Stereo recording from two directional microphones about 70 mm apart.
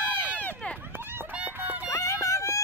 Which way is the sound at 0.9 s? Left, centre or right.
Right.